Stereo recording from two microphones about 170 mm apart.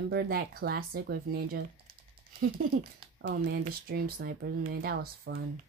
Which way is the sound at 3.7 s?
60° right (ahead or behind).